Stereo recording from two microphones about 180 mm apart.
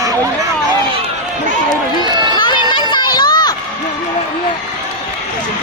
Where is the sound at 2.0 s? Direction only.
25° right (ahead or behind).